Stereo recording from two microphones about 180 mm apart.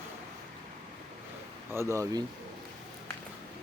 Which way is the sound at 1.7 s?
15° right (ahead or behind).